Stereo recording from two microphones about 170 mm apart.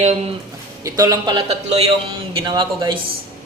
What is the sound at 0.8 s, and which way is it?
Speech, 20° right (ahead or behind).